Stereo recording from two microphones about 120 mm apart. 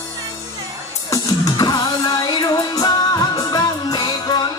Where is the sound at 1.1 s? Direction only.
30° left (ahead or behind).